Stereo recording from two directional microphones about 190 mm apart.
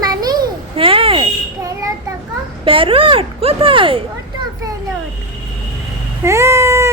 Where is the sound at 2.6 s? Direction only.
30° right (ahead or behind).